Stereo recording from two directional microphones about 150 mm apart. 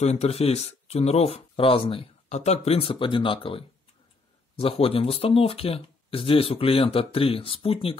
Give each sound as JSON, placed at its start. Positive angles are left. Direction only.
{"t": 0.0, "sound": "speech", "side_deg": 45}